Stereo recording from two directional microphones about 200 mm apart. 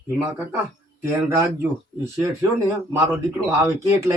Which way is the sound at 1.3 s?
10° right (ahead or behind).